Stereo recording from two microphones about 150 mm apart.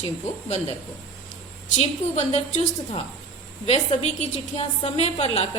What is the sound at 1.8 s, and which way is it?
Speech, 45° left (ahead or behind).